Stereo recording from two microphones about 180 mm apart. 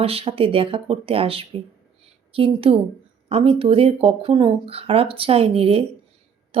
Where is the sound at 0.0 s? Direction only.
30° right (ahead or behind).